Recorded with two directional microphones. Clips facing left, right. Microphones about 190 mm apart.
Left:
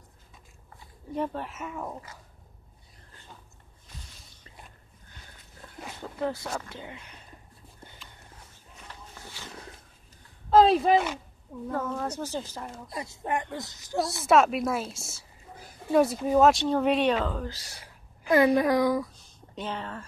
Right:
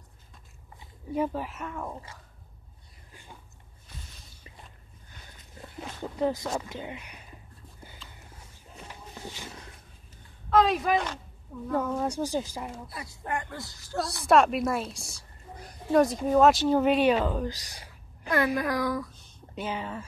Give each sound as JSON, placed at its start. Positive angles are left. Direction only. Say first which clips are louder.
{"t": 1.1, "sound": "a woman's voice", "louder": "right 2 dB", "side_deg": -5}
{"t": 3.1, "sound": "a sound", "louder": "right 1 dB", "side_deg": -10}
{"t": 6.0, "sound": "speech", "louder": "right 3 dB", "side_deg": -15}
{"t": 8.8, "sound": "a sound", "louder": "right 4 dB", "side_deg": -20}
{"t": 10.5, "sound": "speech", "louder": "left 4 dB", "side_deg": 30}
{"t": 11.7, "sound": "speech", "louder": "right 3 dB", "side_deg": -15}
{"t": 12.9, "sound": "speech", "louder": "left 5 dB", "side_deg": 25}
{"t": 14.2, "sound": "a woman's voice", "louder": "right 1 dB", "side_deg": 0}
{"t": 18.3, "sound": "speech", "louder": "left 6 dB", "side_deg": 25}
{"t": 19.5, "sound": "speech", "louder": "right 1 dB", "side_deg": -5}